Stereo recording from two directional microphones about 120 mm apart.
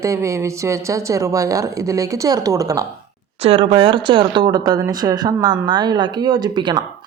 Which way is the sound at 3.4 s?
50° right (ahead or behind).